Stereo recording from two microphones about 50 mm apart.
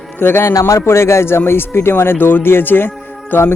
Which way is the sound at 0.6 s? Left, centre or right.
Left.